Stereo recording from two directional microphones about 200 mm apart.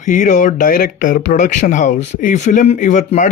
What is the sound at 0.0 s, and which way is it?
Speech, 40° left (ahead or behind).